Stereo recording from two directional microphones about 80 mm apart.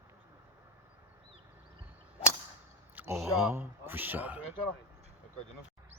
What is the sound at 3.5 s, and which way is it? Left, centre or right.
Speech, right.